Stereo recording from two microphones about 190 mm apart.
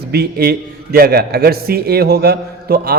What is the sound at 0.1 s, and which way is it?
A man's voice, 55° right (ahead or behind).